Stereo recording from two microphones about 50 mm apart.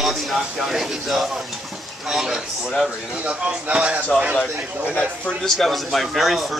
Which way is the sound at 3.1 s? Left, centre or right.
Right.